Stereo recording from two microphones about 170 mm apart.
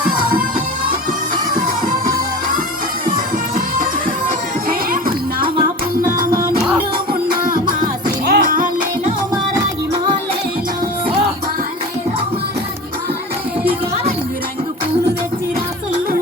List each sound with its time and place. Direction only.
4.7 s music: 55° right (ahead or behind)
7.4 s music: 55° right (ahead or behind)